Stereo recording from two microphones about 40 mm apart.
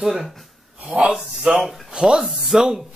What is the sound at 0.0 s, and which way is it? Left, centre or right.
Speech, centre.